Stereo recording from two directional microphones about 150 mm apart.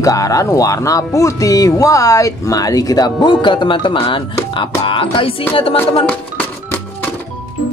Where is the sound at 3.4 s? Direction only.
30° left (ahead or behind).